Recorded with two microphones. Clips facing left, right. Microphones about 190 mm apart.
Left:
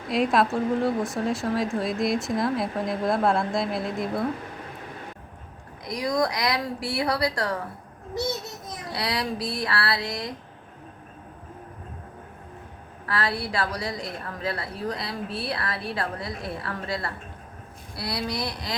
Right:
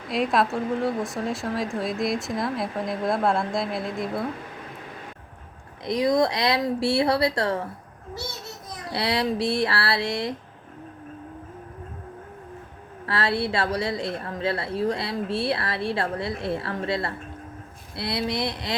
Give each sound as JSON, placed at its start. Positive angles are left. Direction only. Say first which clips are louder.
{"t": 0.1, "sound": "a woman's voice", "louder": "left 1 dB", "side_deg": 0}
{"t": 5.8, "sound": "speech", "louder": "right 4 dB", "side_deg": -25}
{"t": 8.9, "sound": "speech", "louder": "right 4 dB", "side_deg": -25}
{"t": 13.1, "sound": "speech", "louder": "right 3 dB", "side_deg": -25}